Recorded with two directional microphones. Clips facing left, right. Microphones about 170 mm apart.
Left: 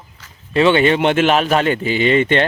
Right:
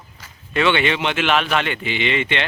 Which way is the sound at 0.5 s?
35° left (ahead or behind).